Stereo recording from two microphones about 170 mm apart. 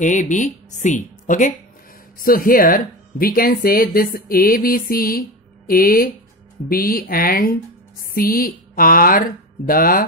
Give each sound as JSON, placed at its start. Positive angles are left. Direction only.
{"t": 0.0, "sound": "speech", "side_deg": 50}